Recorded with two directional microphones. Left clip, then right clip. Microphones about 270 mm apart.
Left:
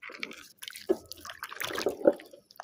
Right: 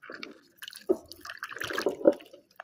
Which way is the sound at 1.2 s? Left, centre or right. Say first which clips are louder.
Right 1 dB; centre.